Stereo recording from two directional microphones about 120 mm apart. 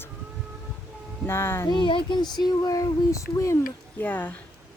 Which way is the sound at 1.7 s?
40° left (ahead or behind).